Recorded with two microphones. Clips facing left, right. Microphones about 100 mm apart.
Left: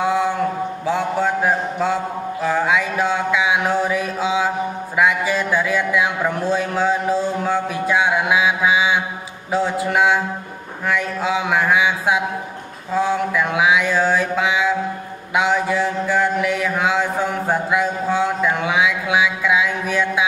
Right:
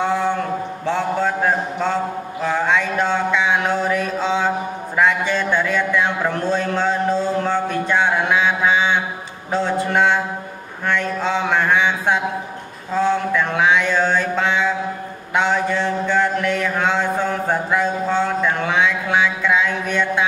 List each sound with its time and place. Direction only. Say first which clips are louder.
0.0 s a sound: left 1 dB; 10° left (ahead or behind)
0.8 s mantra: even; 5° left (ahead or behind)
2.4 s a man's voice: even; 5° left (ahead or behind)
15.3 s mantra: left 1 dB; 5° left (ahead or behind)